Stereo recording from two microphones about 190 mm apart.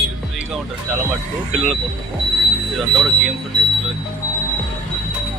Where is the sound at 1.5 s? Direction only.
Centre (ahead or behind).